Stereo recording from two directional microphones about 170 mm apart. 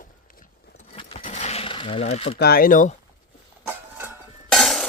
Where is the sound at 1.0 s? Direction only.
35° left (ahead or behind).